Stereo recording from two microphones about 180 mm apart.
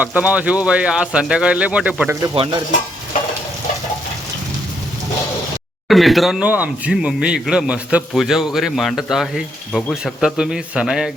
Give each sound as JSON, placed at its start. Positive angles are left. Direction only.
{"t": 0.0, "sound": "speech", "side_deg": -10}
{"t": 2.3, "sound": "stir", "side_deg": -30}
{"t": 5.9, "sound": "speech", "side_deg": 0}